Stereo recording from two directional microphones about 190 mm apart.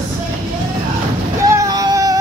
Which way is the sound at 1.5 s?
20° right (ahead or behind).